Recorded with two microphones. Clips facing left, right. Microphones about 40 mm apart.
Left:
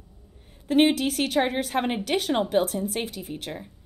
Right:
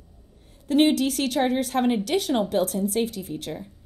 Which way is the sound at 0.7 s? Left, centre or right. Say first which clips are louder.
Right 1 dB; centre.